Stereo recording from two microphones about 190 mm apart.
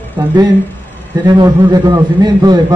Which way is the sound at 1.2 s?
20° right (ahead or behind).